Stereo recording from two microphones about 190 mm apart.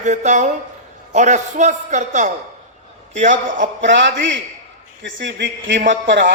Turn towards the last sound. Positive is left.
turn(degrees=-70)  # may be behind; listen again after turning